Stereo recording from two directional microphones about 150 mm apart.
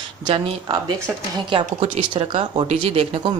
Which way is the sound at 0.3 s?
25° right (ahead or behind).